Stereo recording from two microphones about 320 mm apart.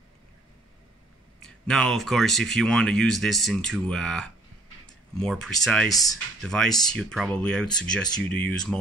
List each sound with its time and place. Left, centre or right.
1.7 s speech: centre